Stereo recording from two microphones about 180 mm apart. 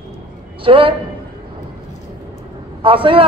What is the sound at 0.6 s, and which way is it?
Speech, 30° right (ahead or behind).